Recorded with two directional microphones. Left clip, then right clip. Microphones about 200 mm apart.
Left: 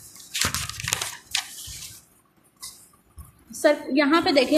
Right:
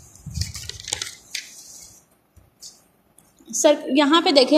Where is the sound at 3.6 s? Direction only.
25° right (ahead or behind).